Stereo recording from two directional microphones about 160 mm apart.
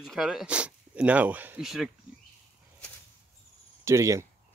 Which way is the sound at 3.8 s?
20° right (ahead or behind).